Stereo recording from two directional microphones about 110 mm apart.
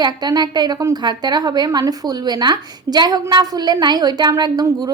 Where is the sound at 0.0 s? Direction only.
40° right (ahead or behind).